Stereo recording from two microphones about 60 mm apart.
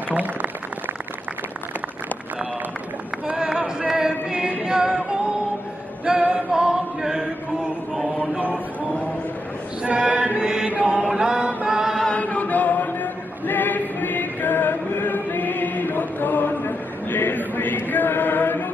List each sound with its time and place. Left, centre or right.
0.1 s a sound: right
3.3 s singing: centre
6.0 s chant: centre
8.2 s a sound: right
10.4 s mantra: centre
10.7 s chant: centre
12.1 s chant: left